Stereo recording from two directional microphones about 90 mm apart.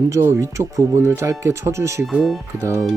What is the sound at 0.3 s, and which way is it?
Speech, 35° right (ahead or behind).